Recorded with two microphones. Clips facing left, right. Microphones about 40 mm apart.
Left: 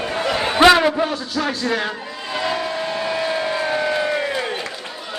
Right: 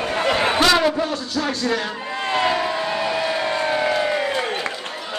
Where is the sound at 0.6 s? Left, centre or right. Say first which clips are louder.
Left 8 dB; centre.